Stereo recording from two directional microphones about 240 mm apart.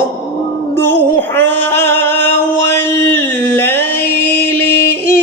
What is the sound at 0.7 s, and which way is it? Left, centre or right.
Music, centre.